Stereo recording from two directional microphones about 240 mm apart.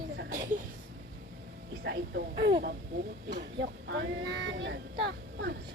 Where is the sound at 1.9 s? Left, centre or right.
Right.